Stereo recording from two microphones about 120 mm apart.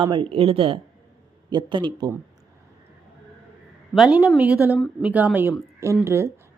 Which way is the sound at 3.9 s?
5° right (ahead or behind).